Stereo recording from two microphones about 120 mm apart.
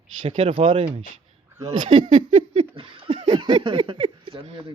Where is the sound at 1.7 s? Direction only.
90° right.